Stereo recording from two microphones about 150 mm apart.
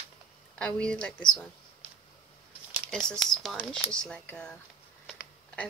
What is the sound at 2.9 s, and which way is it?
Speech, 5° left (ahead or behind).